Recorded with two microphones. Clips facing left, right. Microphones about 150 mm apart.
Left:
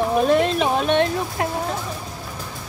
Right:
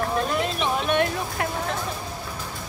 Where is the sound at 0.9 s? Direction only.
25° left (ahead or behind).